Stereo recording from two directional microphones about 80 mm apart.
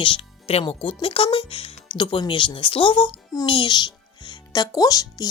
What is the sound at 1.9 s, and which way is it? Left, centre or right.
Speech, left.